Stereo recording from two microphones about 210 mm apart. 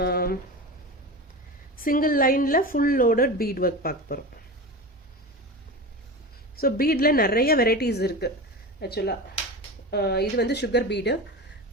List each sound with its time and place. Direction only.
0.0 s speech: 45° left (ahead or behind)
1.8 s speech: 40° left (ahead or behind)
6.6 s speech: 45° left (ahead or behind)